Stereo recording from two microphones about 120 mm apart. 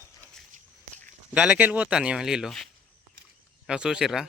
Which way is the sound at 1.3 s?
10° right (ahead or behind).